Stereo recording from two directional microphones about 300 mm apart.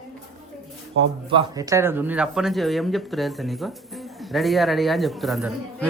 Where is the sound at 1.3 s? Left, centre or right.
Centre.